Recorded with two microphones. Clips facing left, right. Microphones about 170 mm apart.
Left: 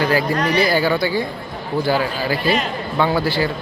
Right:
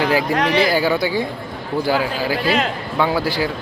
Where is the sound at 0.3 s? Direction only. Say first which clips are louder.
Right 1 dB; 90° right.